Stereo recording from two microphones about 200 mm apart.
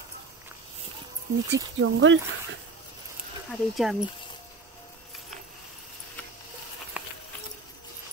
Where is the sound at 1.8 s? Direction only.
70° right (ahead or behind).